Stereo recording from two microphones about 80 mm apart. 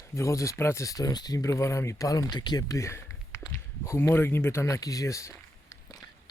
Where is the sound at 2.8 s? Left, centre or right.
Left.